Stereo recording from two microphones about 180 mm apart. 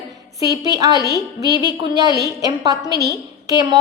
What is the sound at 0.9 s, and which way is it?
Speech, 20° left (ahead or behind).